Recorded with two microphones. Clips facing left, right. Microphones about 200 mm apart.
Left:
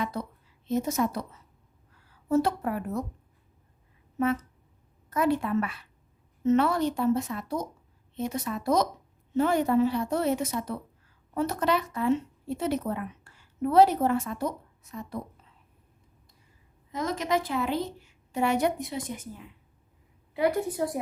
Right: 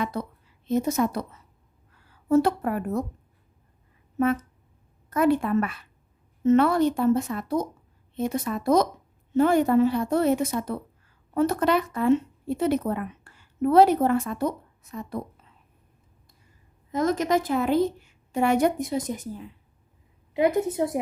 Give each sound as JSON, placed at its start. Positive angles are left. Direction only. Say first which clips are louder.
{"t": 0.0, "sound": "a woman's voice", "louder": "right 3 dB", "side_deg": -60}
{"t": 2.4, "sound": "a woman's voice", "louder": "right 4 dB", "side_deg": -55}
{"t": 5.1, "sound": "a woman's voice", "louder": "right 4 dB", "side_deg": -50}
{"t": 16.9, "sound": "a woman's voice", "louder": "right 5 dB", "side_deg": -50}
{"t": 20.3, "sound": "a woman's voice", "louder": "right 4 dB", "side_deg": -20}